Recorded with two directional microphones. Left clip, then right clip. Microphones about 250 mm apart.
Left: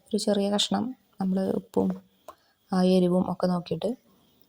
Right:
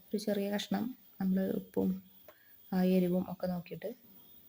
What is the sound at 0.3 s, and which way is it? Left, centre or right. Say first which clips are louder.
Speech: left 10 dB; left.